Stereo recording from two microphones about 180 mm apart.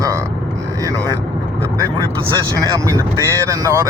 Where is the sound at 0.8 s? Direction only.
20° right (ahead or behind).